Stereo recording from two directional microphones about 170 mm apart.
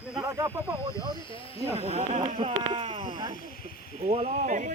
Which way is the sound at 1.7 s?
40° right (ahead or behind).